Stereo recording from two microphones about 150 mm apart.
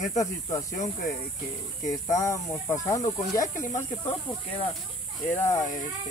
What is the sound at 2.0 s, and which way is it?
Speech, 20° left (ahead or behind).